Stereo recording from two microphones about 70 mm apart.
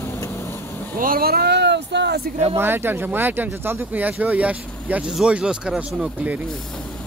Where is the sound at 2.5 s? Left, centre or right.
Right.